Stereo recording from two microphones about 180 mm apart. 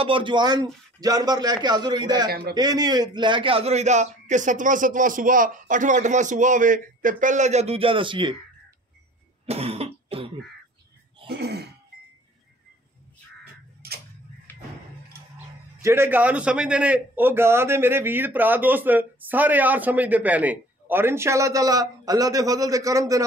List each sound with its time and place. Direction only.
0.0 s a man's voice: 30° right (ahead or behind)
9.5 s cough: 35° right (ahead or behind)
11.2 s throat clearing: 65° right (ahead or behind)
13.8 s tick-tock: 60° right (ahead or behind)
15.8 s a man's voice: 15° right (ahead or behind)